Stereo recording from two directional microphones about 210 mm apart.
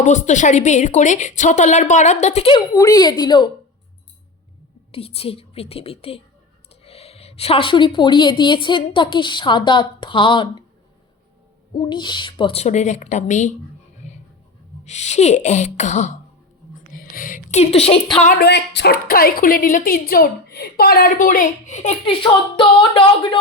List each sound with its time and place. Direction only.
0.0 s a woman's voice: 35° left (ahead or behind); by 3.5 s 20° left (ahead or behind)
4.9 s a woman's voice: 30° left (ahead or behind)
11.8 s a woman's voice: 20° left (ahead or behind)
14.0 s writing: 35° left (ahead or behind)
14.8 s a woman's voice: 35° left (ahead or behind)
18.3 s a woman's voice: 50° left (ahead or behind); by 23.4 s 25° left (ahead or behind)